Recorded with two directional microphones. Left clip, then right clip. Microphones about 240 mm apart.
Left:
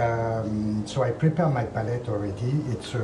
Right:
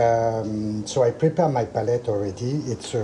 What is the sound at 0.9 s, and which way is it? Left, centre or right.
Speech, right.